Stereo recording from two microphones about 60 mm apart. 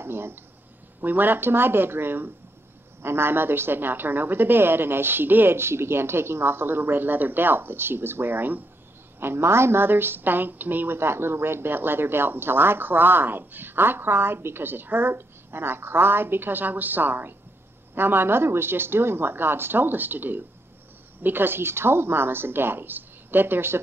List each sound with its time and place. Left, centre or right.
0.0 s a woman's voice: right
9.2 s a woman's voice: right